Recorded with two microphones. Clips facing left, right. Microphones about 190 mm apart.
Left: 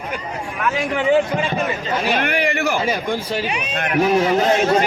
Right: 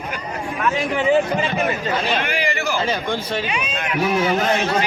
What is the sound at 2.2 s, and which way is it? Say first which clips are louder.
Speech: left 3 dB; 60° left (ahead or behind).